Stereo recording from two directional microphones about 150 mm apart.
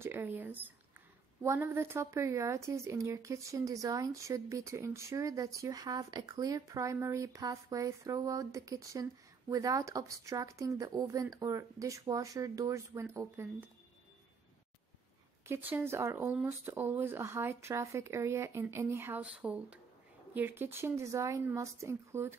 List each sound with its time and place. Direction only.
0.0 s speech: 15° right (ahead or behind)
15.4 s speech: 15° right (ahead or behind)